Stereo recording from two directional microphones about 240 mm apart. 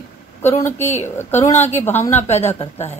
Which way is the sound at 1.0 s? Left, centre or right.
Centre.